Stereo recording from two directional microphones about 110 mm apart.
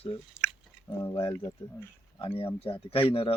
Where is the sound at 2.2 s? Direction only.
55° left (ahead or behind).